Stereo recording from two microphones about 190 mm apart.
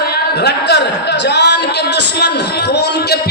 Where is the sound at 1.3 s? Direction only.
65° left (ahead or behind).